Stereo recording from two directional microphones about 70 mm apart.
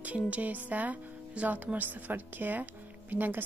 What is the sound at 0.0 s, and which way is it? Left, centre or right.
Speech, right.